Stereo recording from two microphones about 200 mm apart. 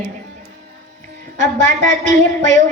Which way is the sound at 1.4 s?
35° right (ahead or behind).